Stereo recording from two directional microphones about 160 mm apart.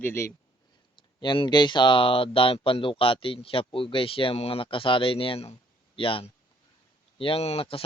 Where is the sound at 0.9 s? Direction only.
30° left (ahead or behind).